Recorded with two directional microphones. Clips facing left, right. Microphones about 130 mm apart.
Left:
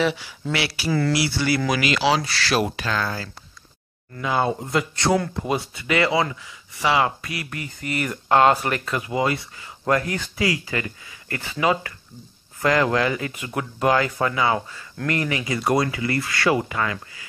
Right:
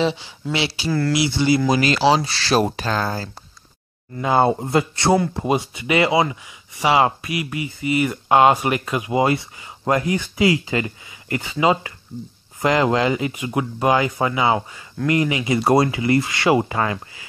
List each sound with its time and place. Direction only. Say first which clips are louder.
0.0 s speech: right 1 dB; 25° right (ahead or behind)
0.8 s speech: even; centre (ahead or behind)
1.1 s speech: right 4 dB; 20° right (ahead or behind)
1.7 s speech: right 4 dB; 35° right (ahead or behind)
13.3 s speech: right 5 dB; 10° right (ahead or behind); by 17.3 s 30° right (ahead or behind)